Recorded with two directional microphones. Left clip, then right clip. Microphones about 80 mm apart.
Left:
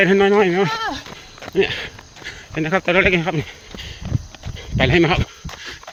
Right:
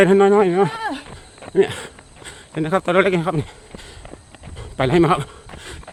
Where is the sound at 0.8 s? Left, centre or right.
Right.